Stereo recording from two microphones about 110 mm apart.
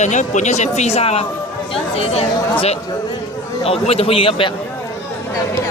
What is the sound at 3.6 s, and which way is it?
Speech, 65° left (ahead or behind).